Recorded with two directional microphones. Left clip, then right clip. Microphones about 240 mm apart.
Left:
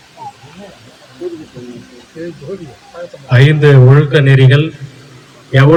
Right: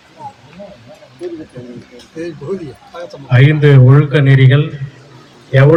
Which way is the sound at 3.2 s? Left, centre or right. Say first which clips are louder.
Left 2 dB; left.